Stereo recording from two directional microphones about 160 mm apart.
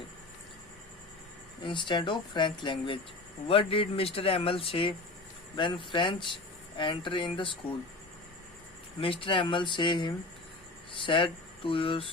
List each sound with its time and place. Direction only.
1.6 s speech: 30° left (ahead or behind)
9.0 s speech: 35° left (ahead or behind)